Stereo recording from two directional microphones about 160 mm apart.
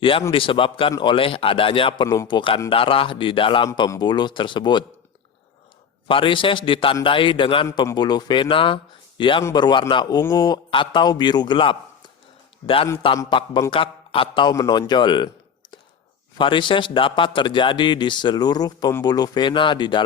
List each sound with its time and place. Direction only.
0.0 s speech: 35° left (ahead or behind)
6.1 s speech: 30° left (ahead or behind)
16.4 s speech: 30° left (ahead or behind)